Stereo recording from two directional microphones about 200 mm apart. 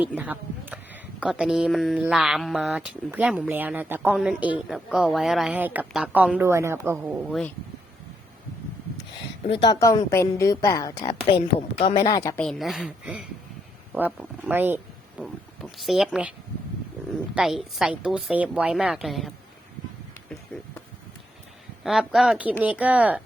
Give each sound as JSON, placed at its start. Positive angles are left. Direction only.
{"t": 0.0, "sound": "a woman's voice", "side_deg": -5}
{"t": 9.5, "sound": "a woman's voice", "side_deg": 25}
{"t": 12.4, "sound": "a woman's voice", "side_deg": 0}
{"t": 15.2, "sound": "a sound", "side_deg": 0}
{"t": 17.3, "sound": "a woman's voice", "side_deg": 0}
{"t": 21.8, "sound": "a woman's voice", "side_deg": 0}